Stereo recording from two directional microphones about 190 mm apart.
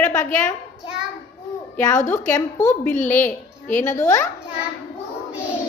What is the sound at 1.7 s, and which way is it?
Speech, 15° left (ahead or behind).